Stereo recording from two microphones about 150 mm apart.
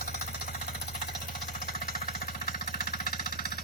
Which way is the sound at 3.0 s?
75° left (ahead or behind).